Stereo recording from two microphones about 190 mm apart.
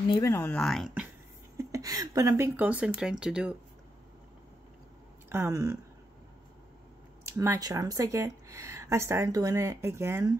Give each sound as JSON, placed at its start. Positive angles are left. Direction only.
{"t": 0.1, "sound": "speech", "side_deg": 15}
{"t": 1.6, "sound": "speech", "side_deg": -15}
{"t": 5.3, "sound": "speech", "side_deg": -15}
{"t": 7.2, "sound": "speech", "side_deg": -15}